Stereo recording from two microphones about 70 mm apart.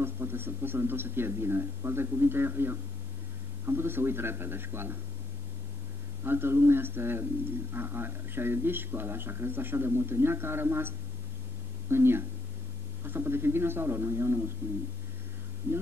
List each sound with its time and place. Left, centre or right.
0.0 s speech: right
6.2 s speech: right